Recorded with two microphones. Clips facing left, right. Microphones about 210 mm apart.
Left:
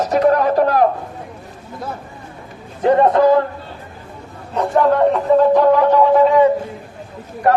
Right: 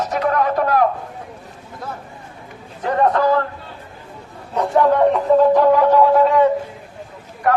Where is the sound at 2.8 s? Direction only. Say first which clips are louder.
Left 5 dB; 25° left (ahead or behind).